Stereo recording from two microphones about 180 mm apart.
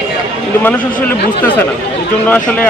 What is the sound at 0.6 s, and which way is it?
Speech, 10° left (ahead or behind).